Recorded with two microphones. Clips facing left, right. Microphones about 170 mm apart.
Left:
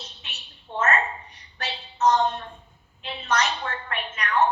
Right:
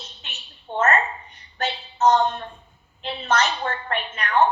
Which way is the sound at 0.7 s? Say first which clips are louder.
Right 4 dB; 30° right (ahead or behind).